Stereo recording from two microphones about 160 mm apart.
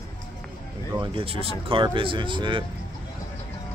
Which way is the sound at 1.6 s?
35° right (ahead or behind).